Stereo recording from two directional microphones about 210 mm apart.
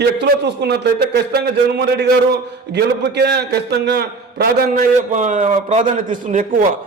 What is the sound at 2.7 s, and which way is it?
A man's voice, 50° right (ahead or behind).